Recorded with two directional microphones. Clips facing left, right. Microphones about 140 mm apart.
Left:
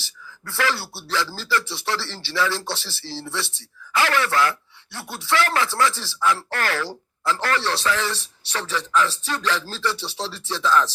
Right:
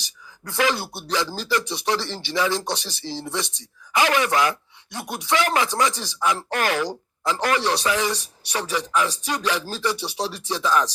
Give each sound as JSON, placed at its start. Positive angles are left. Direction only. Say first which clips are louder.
{"t": 0.0, "sound": "speech", "louder": "even", "side_deg": -15}